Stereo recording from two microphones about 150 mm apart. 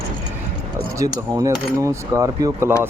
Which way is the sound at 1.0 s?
20° right (ahead or behind).